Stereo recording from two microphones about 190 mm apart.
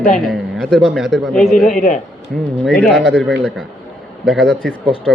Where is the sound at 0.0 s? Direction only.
5° left (ahead or behind).